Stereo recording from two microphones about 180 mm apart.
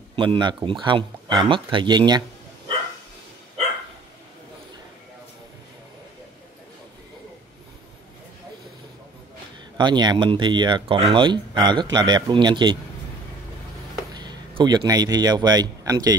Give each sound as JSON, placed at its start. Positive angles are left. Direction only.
{"t": 0.1, "sound": "speech", "side_deg": -30}
{"t": 9.8, "sound": "speech", "side_deg": -25}
{"t": 14.1, "sound": "speech", "side_deg": -25}